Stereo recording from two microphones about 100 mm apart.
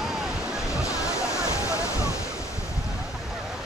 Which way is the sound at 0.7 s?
30° left (ahead or behind).